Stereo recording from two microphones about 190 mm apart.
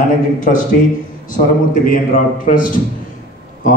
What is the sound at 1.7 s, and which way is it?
A man's voice, 45° left (ahead or behind).